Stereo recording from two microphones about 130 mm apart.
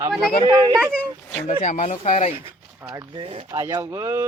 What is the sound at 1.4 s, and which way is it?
Speech, 65° left (ahead or behind).